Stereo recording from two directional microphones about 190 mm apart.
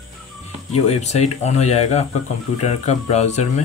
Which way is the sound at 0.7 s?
35° left (ahead or behind).